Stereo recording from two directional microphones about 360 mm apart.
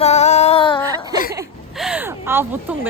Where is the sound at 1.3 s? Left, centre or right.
Centre.